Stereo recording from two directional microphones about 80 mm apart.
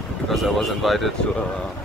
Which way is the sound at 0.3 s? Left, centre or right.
Centre.